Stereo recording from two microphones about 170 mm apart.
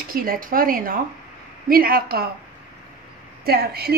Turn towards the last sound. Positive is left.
turn(degrees=-65)  # may be behind; listen again after turning